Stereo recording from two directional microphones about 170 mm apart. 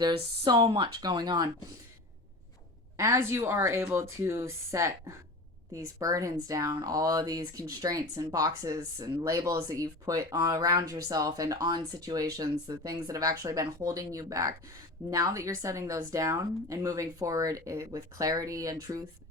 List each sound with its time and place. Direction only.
0.4 s speech: 25° right (ahead or behind)
3.0 s a woman's voice: 15° right (ahead or behind)